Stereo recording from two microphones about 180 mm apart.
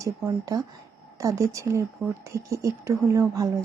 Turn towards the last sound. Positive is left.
turn(degrees=-15)  # may be behind; listen again after turning